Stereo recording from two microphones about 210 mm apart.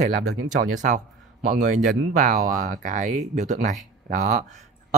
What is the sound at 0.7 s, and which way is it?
Speech, 35° right (ahead or behind).